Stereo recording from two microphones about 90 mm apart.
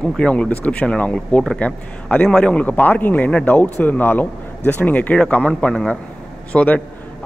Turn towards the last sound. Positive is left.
turn(degrees=15)  # may be behind; listen again after turning